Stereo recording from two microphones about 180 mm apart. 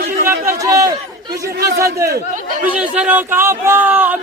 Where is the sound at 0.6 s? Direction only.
20° right (ahead or behind).